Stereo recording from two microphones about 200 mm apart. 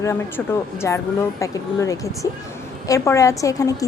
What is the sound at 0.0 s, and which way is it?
A woman's voice, 15° left (ahead or behind).